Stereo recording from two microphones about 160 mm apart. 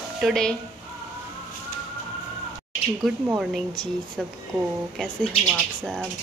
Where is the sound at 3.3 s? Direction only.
Centre (ahead or behind).